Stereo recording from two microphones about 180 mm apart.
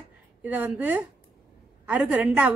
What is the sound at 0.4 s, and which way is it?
Speech, 10° right (ahead or behind).